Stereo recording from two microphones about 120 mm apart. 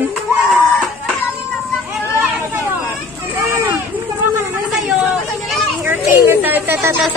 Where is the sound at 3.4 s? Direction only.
20° right (ahead or behind).